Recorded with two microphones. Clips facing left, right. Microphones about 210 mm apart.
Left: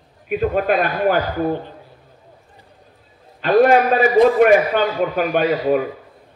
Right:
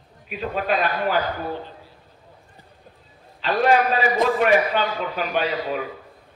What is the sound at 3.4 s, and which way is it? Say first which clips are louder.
A man's voice: left 6 dB; 50° left (ahead or behind).